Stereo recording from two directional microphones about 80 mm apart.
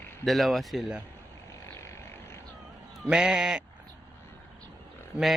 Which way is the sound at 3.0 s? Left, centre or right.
Centre.